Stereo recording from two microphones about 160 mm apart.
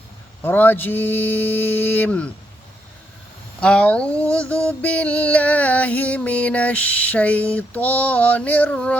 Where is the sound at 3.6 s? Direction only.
5° left (ahead or behind).